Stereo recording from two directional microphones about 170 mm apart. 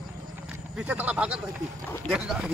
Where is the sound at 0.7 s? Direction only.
5° right (ahead or behind).